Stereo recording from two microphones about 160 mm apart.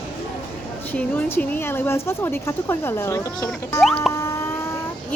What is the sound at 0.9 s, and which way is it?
A woman's voice, 10° left (ahead or behind).